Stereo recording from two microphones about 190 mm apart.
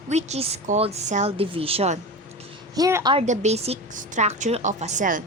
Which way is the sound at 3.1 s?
40° right (ahead or behind).